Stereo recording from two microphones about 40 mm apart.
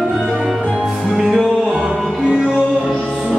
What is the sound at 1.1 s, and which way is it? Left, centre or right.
Music, centre.